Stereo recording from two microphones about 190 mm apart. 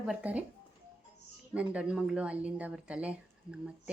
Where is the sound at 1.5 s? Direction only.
5° right (ahead or behind).